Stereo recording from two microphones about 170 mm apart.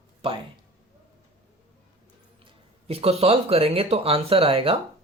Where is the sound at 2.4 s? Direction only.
35° right (ahead or behind).